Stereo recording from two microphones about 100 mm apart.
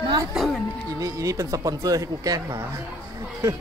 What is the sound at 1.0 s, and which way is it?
Speech, 35° right (ahead or behind).